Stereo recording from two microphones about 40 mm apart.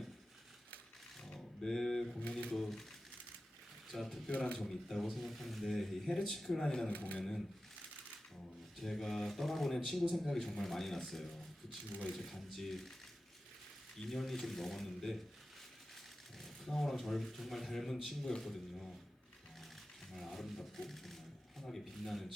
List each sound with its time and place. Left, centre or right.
1.2 s a sound: centre
2.6 s speech: centre
3.9 s speech: centre
4.3 s speech: left
4.6 s speech: centre
6.9 s speech: left
8.8 s speech: centre
14.1 s speech: centre
16.4 s speech: centre
20.1 s a sound: centre
21.6 s speech: centre